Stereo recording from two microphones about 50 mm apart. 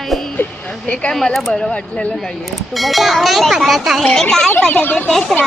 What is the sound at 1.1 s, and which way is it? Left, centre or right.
Speech, centre.